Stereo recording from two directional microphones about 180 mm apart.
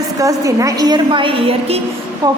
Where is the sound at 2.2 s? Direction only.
20° right (ahead or behind).